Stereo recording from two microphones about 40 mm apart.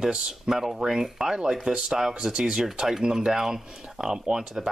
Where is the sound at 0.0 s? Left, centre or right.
Centre.